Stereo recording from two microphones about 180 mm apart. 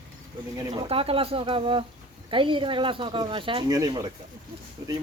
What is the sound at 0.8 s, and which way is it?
Speech, 30° right (ahead or behind).